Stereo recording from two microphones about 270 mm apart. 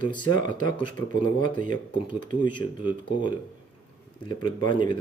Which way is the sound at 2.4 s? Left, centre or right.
Centre.